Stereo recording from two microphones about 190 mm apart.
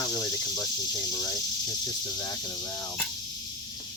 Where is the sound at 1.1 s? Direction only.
20° left (ahead or behind).